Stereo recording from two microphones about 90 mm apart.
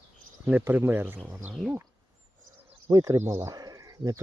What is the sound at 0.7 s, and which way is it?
Speech, 25° right (ahead or behind).